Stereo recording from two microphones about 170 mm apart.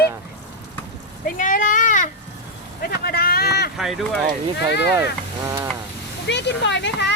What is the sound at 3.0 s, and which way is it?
Boat, 65° left (ahead or behind).